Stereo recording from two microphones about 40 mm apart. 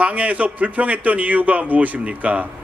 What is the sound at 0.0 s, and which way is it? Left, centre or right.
A man's voice, right.